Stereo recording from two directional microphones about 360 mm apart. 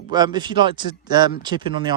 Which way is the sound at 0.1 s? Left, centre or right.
Centre.